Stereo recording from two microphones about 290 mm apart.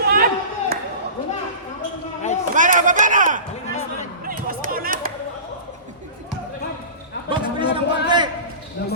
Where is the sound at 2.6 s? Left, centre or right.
Right.